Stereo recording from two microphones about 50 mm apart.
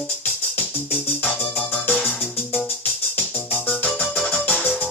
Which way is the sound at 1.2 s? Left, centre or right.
Left.